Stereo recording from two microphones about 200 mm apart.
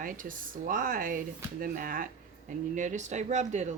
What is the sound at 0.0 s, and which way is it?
Speech, 40° right (ahead or behind).